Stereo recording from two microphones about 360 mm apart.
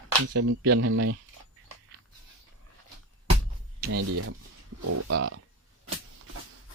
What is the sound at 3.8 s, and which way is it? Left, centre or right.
Speech, right.